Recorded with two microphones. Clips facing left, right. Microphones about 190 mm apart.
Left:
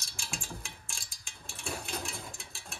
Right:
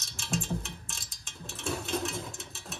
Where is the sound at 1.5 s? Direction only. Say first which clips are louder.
Right 6 dB; centre (ahead or behind).